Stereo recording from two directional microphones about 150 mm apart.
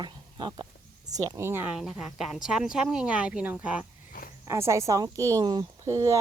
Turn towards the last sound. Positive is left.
turn(degrees=-20)  # may be behind; listen again after turning